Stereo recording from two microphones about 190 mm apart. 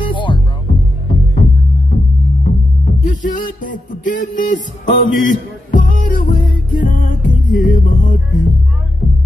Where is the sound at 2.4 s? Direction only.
40° left (ahead or behind).